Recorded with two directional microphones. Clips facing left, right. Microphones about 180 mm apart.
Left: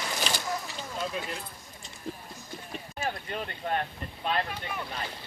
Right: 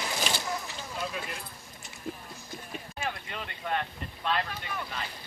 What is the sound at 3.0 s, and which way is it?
Speech, 40° left (ahead or behind).